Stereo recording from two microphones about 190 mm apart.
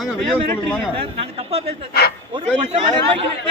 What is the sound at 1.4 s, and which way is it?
Speech, 30° right (ahead or behind).